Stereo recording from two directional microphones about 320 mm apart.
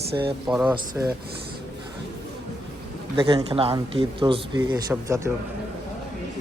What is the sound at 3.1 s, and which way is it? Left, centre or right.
Speech, centre.